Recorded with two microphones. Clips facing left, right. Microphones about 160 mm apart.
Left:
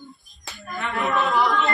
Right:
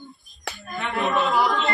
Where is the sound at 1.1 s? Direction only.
20° right (ahead or behind).